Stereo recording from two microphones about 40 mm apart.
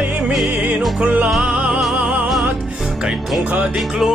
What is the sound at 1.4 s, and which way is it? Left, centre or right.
Music, right.